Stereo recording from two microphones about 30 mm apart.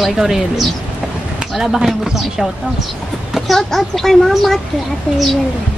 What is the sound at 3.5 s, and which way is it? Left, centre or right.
A woman's voice, centre.